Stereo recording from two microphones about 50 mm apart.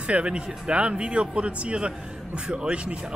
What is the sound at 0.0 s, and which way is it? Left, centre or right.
Speech, right.